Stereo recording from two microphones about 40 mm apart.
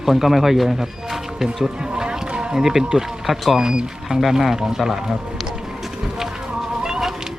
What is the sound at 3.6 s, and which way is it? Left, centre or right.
Speech, centre.